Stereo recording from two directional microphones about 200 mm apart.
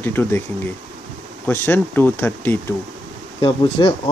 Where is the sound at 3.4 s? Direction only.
25° left (ahead or behind).